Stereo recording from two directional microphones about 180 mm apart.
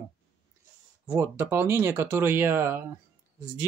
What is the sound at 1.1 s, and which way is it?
Speech, 15° right (ahead or behind).